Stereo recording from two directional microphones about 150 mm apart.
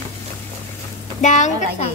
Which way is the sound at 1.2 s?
55° left (ahead or behind).